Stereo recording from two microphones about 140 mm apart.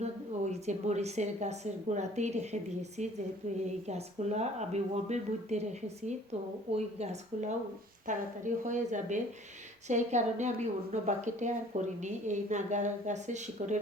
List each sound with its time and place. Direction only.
0.0 s speech: 55° right (ahead or behind)
3.8 s speech: 50° right (ahead or behind)
6.7 s speech: 50° right (ahead or behind)
8.0 s speech: 65° right (ahead or behind)